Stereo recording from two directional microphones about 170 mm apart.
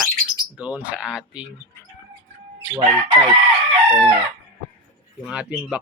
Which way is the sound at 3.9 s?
15° right (ahead or behind).